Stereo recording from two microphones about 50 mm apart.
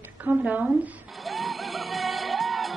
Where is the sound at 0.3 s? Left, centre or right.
Right.